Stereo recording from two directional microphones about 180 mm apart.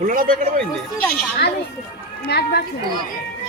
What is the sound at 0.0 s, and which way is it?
Speech, 50° right (ahead or behind).